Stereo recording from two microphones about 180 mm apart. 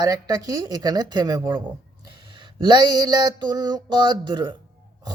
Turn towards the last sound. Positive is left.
turn(degrees=-25)  # may be behind; listen again after turning